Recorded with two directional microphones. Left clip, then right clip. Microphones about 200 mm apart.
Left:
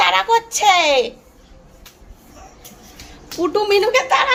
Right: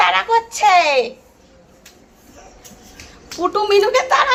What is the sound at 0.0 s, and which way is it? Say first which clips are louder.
A child's voice: even; 20° left (ahead or behind).